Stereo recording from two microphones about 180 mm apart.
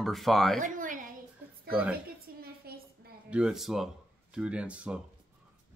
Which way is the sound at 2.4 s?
55° right (ahead or behind).